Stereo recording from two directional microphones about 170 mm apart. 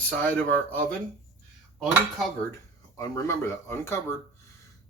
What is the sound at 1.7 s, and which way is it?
Cutlery, centre (ahead or behind).